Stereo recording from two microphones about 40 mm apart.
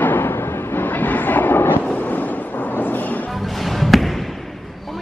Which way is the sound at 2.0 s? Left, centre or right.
Left.